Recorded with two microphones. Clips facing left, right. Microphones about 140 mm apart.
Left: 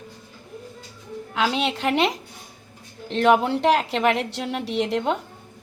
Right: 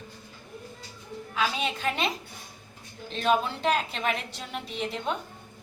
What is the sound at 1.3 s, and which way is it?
Speech, 90° left.